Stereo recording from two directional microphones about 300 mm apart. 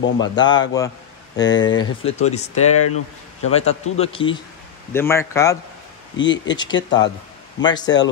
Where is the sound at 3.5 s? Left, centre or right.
Left.